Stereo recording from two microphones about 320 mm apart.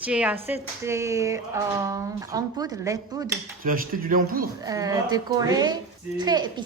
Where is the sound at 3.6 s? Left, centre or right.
Right.